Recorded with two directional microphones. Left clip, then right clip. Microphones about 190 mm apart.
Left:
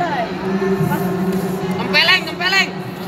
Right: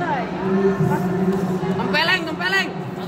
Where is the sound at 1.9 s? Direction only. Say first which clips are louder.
Left 6 dB; 55° right (ahead or behind).